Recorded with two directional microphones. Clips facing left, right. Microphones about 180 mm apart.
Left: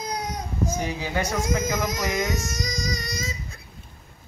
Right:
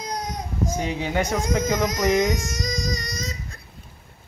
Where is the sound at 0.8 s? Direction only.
20° right (ahead or behind).